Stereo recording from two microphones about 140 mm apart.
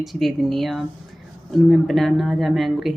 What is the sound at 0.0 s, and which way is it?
Speech, centre (ahead or behind).